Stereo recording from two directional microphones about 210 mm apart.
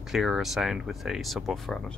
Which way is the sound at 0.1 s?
Centre (ahead or behind).